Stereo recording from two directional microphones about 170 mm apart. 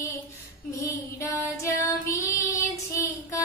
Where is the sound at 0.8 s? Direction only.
20° left (ahead or behind).